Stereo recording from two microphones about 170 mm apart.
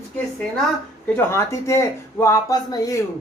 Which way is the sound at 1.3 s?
15° left (ahead or behind).